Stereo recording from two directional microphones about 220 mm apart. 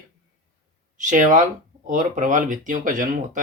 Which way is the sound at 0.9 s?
35° right (ahead or behind).